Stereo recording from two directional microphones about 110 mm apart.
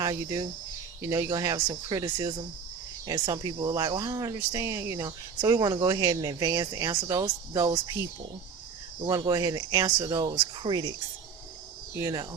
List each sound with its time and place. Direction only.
0.0 s speech: 35° right (ahead or behind)
9.0 s speech: 30° right (ahead or behind)